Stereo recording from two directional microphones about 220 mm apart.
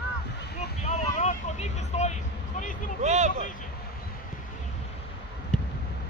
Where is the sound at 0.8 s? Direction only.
35° left (ahead or behind).